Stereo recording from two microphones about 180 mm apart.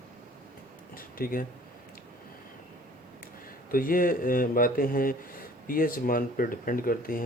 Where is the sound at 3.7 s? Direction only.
50° left (ahead or behind).